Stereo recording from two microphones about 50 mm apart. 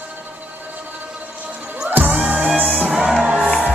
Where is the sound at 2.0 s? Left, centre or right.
Right.